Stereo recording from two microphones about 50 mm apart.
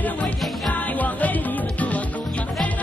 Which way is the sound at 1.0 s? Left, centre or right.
Left.